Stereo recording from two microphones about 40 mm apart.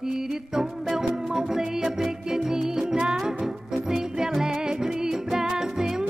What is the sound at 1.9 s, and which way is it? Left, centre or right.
Music, centre.